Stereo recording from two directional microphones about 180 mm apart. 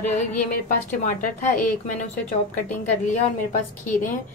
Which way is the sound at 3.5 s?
45° left (ahead or behind).